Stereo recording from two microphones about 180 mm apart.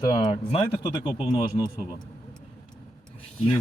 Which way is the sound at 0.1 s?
25° left (ahead or behind).